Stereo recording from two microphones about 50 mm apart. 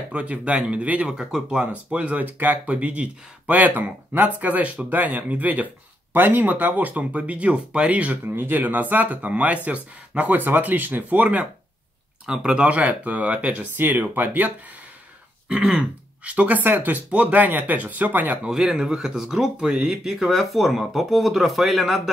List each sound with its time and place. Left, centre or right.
0.1 s speech: right
1.6 s speech: right
2.2 s speech: right
12.3 s speech: centre
12.6 s speech: right
13.7 s speech: right
15.4 s speech: right
17.1 s speech: right
18.4 s speech: centre
19.5 s speech: centre
20.1 s speech: centre